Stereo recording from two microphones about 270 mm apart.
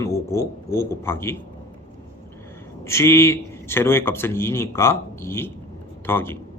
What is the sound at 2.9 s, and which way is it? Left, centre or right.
A man's voice, centre.